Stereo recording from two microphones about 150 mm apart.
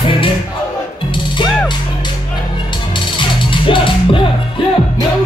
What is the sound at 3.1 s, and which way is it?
Music, 35° left (ahead or behind).